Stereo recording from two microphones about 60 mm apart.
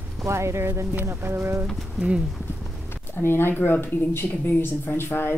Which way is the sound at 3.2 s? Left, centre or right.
Left.